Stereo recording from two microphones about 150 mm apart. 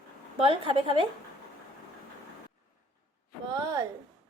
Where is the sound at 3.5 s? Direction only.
25° right (ahead or behind).